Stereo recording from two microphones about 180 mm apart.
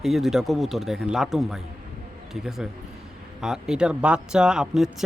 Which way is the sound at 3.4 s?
5° right (ahead or behind).